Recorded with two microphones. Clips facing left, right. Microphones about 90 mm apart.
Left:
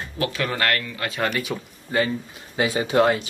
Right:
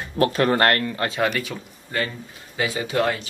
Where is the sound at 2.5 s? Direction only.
30° left (ahead or behind).